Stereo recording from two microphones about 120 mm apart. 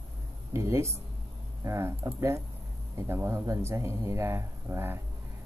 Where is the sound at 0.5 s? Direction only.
25° right (ahead or behind).